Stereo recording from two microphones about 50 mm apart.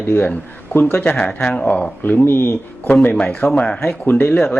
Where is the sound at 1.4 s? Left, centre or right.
Left.